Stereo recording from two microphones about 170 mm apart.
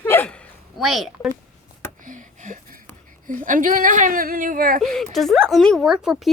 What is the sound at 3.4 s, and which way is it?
Speech, 50° right (ahead or behind).